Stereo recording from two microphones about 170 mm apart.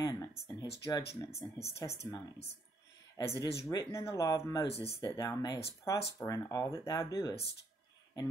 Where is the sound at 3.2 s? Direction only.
20° left (ahead or behind).